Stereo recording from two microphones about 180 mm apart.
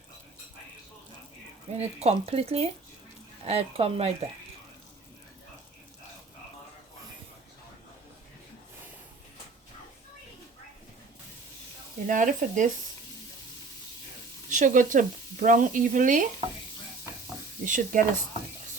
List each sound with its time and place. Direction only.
1.7 s speech: 35° right (ahead or behind)
12.0 s speech: 45° right (ahead or behind)
14.5 s speech: 45° right (ahead or behind)
17.7 s speech: 45° right (ahead or behind)